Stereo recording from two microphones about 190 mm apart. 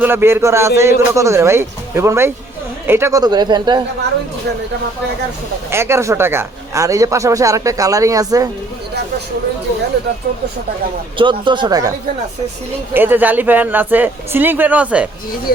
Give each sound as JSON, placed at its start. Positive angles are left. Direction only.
{"t": 0.0, "sound": "speech", "side_deg": -10}
{"t": 5.7, "sound": "speech", "side_deg": -15}
{"t": 11.2, "sound": "speech", "side_deg": -25}
{"t": 15.5, "sound": "speech", "side_deg": 55}